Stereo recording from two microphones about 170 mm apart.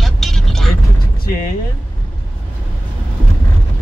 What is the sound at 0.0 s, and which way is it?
Vehicle, centre (ahead or behind).